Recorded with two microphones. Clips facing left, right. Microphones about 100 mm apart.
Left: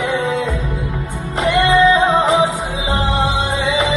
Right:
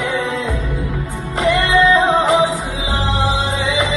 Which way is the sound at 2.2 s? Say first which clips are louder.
Even; centre (ahead or behind).